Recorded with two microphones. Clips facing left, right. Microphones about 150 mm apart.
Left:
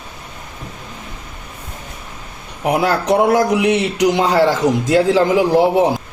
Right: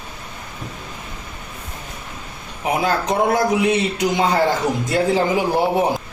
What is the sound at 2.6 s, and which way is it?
Speech, 70° left (ahead or behind).